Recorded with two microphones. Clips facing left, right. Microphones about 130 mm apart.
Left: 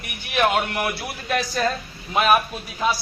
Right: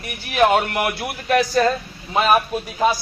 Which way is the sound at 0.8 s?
55° right (ahead or behind).